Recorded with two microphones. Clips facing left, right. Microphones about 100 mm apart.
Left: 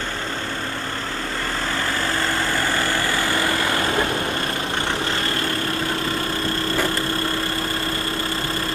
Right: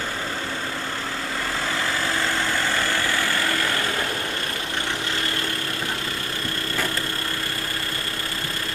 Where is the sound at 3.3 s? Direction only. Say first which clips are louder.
Left 3 dB; 20° left (ahead or behind).